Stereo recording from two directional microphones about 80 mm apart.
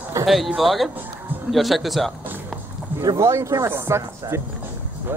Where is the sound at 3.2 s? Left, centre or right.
Right.